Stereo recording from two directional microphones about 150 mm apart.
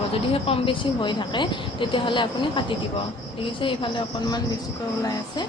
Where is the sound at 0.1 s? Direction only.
40° left (ahead or behind).